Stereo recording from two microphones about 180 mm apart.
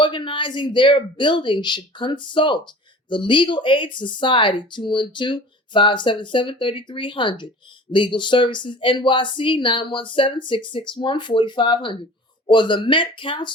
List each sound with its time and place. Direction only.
0.0 s speech: 25° left (ahead or behind)